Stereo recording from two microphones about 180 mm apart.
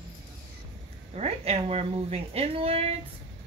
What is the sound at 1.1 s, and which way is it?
Speech, 35° right (ahead or behind).